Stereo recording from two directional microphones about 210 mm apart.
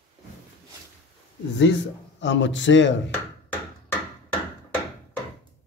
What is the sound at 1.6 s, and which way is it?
A man's voice, 60° left (ahead or behind).